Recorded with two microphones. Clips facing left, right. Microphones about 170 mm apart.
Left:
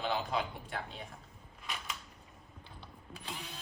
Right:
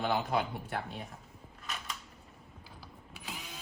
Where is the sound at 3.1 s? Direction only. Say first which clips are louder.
Left 1 dB; 5° right (ahead or behind).